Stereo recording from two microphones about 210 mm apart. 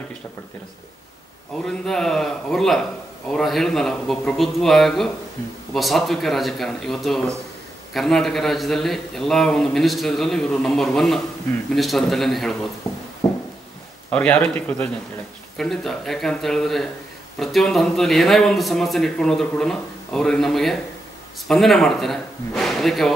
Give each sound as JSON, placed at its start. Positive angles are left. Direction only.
{"t": 1.7, "sound": "a man's voice", "side_deg": 0}
{"t": 13.2, "sound": "a sound", "side_deg": 15}
{"t": 14.1, "sound": "a man's voice", "side_deg": 5}